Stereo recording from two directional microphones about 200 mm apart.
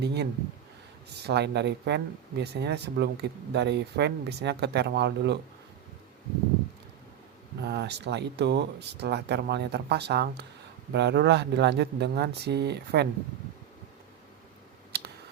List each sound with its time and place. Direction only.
0.0 s speech: 55° right (ahead or behind)
7.6 s speech: 55° right (ahead or behind)
14.9 s a sound: 50° right (ahead or behind)